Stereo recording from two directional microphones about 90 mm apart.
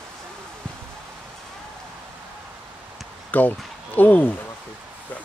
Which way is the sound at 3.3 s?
20° left (ahead or behind).